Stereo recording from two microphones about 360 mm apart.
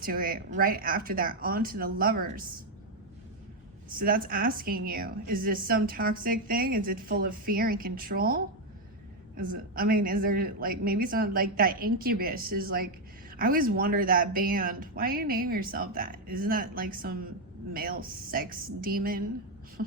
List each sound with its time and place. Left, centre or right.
0.0 s a woman's voice: right
3.8 s a woman's voice: right